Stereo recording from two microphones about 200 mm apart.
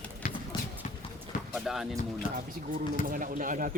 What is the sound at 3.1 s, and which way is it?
Speech, 40° right (ahead or behind).